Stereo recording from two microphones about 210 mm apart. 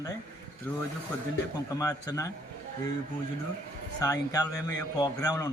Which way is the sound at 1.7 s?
15° left (ahead or behind).